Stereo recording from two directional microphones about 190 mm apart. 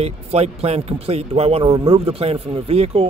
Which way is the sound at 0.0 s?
30° right (ahead or behind).